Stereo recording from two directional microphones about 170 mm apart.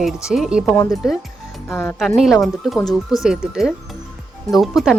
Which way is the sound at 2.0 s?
Centre (ahead or behind).